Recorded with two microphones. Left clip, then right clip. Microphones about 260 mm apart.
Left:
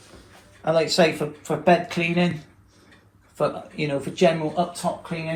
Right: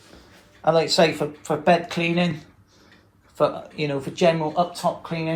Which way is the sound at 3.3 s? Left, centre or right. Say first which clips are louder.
Right 3 dB; centre.